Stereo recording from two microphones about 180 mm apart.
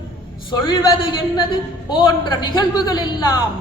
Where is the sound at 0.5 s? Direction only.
25° left (ahead or behind).